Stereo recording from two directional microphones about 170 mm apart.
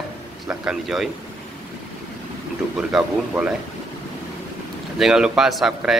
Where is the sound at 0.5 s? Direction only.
5° right (ahead or behind).